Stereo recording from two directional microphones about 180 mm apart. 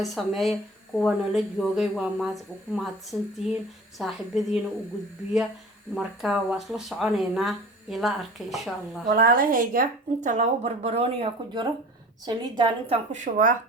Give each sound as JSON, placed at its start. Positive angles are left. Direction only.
{"t": 0.0, "sound": "speech", "side_deg": 0}
{"t": 5.9, "sound": "speech", "side_deg": -5}
{"t": 9.1, "sound": "a woman's voice", "side_deg": -55}
{"t": 13.1, "sound": "speech", "side_deg": -45}